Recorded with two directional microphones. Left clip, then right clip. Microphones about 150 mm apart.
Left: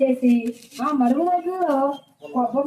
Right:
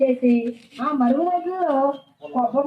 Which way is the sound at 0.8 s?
5° left (ahead or behind).